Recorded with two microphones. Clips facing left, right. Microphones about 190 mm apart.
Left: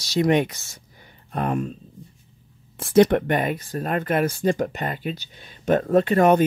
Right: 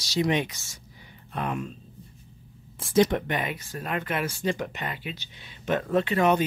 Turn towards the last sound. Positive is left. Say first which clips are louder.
# left 6 dB
turn(degrees=45)  # may be behind; listen again after turning